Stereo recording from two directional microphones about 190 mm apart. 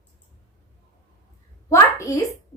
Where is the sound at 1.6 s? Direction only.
15° left (ahead or behind).